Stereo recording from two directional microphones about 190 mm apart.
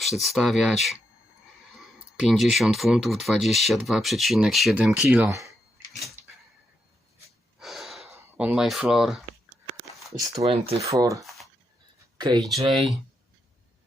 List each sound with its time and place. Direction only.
0.0 s speech: centre (ahead or behind)
7.6 s gasp: centre (ahead or behind)
8.1 s speech: 10° right (ahead or behind)
10.3 s speech: 30° right (ahead or behind)
10.8 s speech: 15° right (ahead or behind)
11.2 s a sound: centre (ahead or behind)
12.1 s speech: 20° right (ahead or behind)